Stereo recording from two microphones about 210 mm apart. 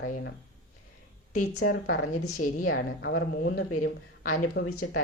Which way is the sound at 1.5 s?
70° left (ahead or behind).